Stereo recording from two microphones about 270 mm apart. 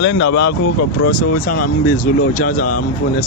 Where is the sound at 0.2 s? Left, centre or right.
Left.